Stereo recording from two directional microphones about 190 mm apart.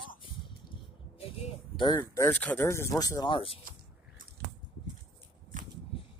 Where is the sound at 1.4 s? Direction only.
25° left (ahead or behind).